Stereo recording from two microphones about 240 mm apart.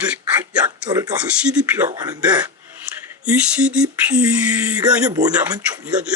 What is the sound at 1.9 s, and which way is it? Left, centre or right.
Speech, centre.